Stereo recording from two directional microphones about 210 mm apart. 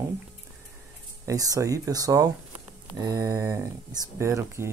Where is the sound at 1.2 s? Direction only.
15° right (ahead or behind).